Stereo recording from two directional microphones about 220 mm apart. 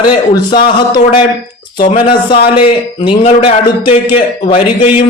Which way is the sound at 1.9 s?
25° left (ahead or behind).